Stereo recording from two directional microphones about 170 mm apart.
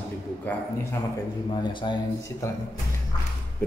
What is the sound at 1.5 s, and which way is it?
A man's voice, 25° left (ahead or behind).